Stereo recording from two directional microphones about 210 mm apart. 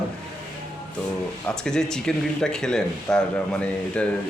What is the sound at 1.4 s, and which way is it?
Speech, 5° left (ahead or behind).